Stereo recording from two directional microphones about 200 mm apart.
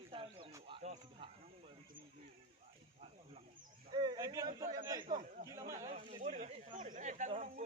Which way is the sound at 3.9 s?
20° right (ahead or behind).